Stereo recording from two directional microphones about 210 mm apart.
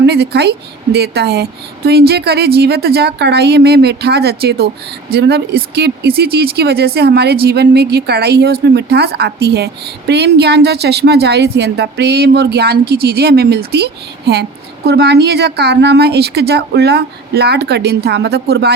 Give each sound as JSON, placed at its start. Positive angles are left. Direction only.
{"t": 0.0, "sound": "a woman's voice", "side_deg": -50}